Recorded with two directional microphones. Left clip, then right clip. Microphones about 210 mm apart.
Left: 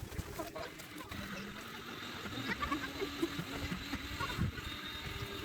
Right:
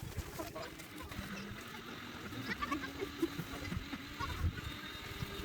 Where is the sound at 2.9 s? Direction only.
45° left (ahead or behind).